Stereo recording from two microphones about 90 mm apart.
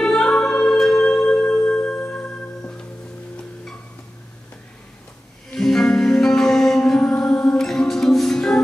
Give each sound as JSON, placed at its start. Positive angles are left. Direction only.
{"t": 0.0, "sound": "music", "side_deg": 5}
{"t": 1.2, "sound": "music", "side_deg": 20}
{"t": 5.5, "sound": "music", "side_deg": 5}